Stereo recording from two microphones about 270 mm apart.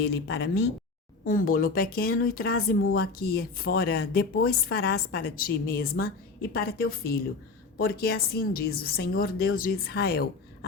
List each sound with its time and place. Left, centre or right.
0.0 s speech: left